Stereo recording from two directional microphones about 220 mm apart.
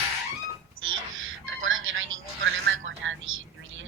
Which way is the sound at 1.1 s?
60° right (ahead or behind).